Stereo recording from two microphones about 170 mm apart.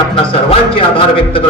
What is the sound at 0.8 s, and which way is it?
Speech, 30° left (ahead or behind).